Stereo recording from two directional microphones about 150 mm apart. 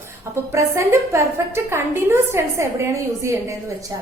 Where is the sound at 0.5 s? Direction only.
20° right (ahead or behind).